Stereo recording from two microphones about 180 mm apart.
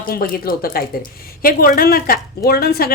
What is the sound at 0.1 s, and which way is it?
Speech, 55° left (ahead or behind).